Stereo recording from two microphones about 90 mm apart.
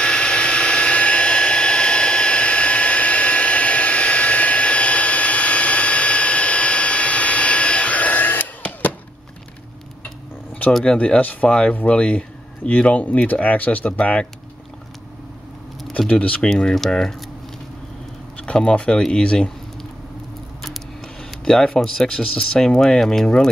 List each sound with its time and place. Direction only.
0.0 s hair dryer: 10° left (ahead or behind)
10.7 s speech: 10° left (ahead or behind)
16.1 s speech: 15° left (ahead or behind)
18.4 s speech: 10° left (ahead or behind)
21.5 s speech: 5° left (ahead or behind)